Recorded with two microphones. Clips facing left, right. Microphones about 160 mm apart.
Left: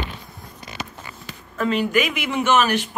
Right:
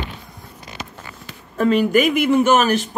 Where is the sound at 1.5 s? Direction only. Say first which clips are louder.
Right 5 dB; 45° right (ahead or behind).